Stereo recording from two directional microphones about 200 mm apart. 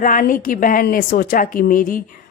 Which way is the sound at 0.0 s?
40° left (ahead or behind).